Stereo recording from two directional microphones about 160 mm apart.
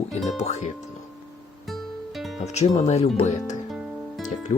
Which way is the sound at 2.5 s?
45° left (ahead or behind).